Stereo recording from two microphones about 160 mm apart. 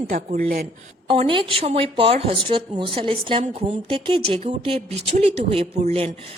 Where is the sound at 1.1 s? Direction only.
35° right (ahead or behind).